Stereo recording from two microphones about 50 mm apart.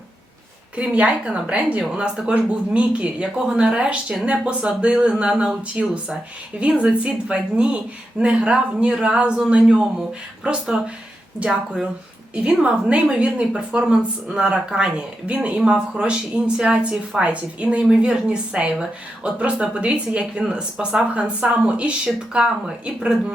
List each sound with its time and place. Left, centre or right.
0.8 s a woman's voice: right